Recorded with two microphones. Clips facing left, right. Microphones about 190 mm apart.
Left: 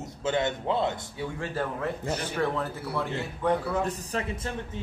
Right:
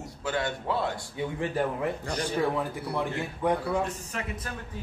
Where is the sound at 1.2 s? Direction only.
15° right (ahead or behind).